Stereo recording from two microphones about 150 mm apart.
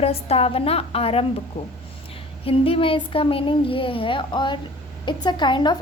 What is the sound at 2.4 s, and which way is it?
A woman's voice, 40° left (ahead or behind).